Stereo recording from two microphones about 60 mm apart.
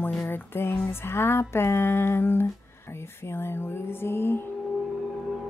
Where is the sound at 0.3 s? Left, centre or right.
Left.